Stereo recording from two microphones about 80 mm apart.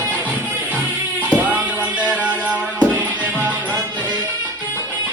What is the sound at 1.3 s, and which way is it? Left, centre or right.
Music, centre.